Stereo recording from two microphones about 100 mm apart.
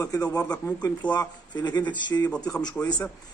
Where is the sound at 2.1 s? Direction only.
25° left (ahead or behind).